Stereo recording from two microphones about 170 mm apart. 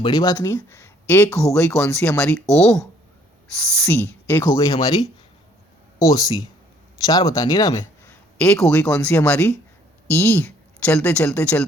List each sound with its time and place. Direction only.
0.0 s speech: 25° left (ahead or behind)
2.5 s speech: 5° left (ahead or behind)
3.8 s speech: 15° left (ahead or behind)